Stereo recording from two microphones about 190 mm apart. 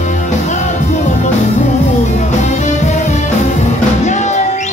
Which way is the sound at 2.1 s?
40° left (ahead or behind).